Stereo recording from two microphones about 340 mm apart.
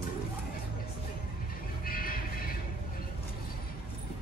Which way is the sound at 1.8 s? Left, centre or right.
Left.